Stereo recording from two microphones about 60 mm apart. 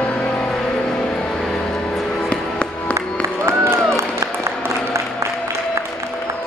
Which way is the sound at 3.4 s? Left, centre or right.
Right.